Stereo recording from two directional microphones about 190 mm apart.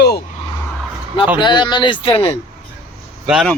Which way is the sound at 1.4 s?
25° left (ahead or behind).